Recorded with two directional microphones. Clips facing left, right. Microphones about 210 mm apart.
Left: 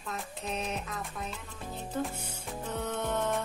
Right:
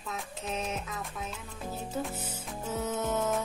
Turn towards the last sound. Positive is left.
turn(degrees=-5)  # may be behind; listen again after turning